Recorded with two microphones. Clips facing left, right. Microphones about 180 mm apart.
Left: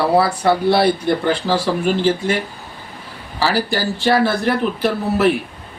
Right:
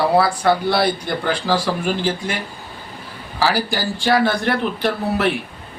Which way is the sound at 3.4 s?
Centre (ahead or behind).